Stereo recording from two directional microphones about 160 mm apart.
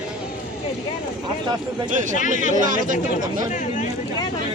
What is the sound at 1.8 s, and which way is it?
Speech, 55° right (ahead or behind).